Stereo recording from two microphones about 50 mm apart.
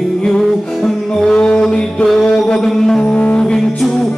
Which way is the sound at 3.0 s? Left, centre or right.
Left.